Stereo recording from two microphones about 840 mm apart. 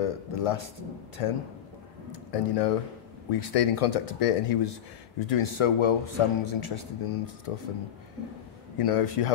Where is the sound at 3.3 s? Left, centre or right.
Left.